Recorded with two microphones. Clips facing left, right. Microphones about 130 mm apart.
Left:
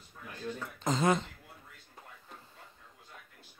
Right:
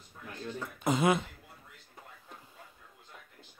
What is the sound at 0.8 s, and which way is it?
Speech, 10° right (ahead or behind).